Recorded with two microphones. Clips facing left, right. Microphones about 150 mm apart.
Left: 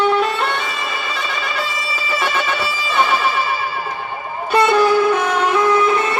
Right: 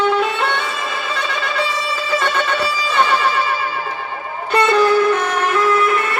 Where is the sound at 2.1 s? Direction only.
5° left (ahead or behind).